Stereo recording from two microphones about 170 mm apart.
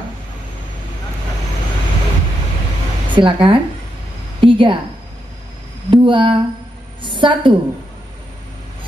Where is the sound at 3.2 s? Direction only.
30° right (ahead or behind).